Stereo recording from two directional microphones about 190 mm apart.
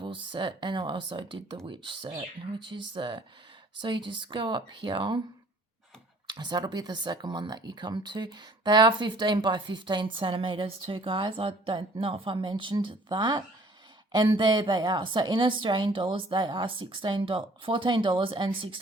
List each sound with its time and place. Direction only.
0.0 s speech: 25° right (ahead or behind)
6.2 s speech: 25° right (ahead or behind)